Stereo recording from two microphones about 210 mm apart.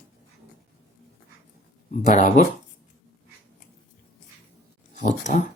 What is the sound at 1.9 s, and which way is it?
Speech, 35° left (ahead or behind).